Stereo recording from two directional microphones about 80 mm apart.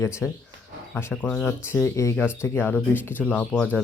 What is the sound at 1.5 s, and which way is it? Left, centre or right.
Speech, left.